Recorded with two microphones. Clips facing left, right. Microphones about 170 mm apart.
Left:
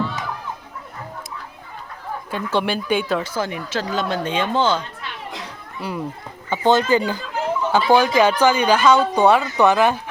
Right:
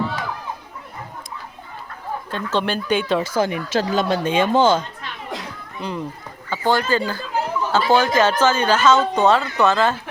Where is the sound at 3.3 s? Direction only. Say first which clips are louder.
Right 4 dB; 15° right (ahead or behind).